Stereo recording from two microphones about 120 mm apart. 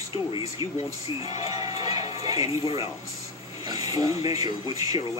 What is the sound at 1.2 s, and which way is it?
Speech, 30° right (ahead or behind).